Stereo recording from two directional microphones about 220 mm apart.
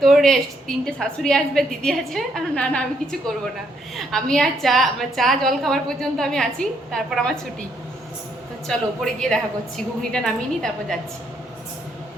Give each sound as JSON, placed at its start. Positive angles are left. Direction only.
{"t": 0.0, "sound": "a woman's voice", "side_deg": 0}
{"t": 8.6, "sound": "a woman's voice", "side_deg": 0}